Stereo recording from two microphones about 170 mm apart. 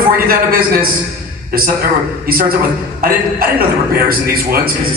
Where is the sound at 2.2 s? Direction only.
60° right (ahead or behind).